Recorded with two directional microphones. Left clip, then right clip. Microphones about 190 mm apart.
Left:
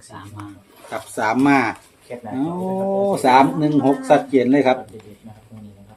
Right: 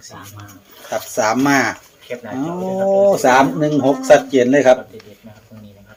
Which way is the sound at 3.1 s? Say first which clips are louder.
Right 2 dB; 20° right (ahead or behind).